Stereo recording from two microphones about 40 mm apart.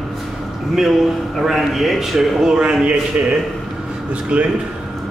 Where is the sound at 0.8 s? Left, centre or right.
Centre.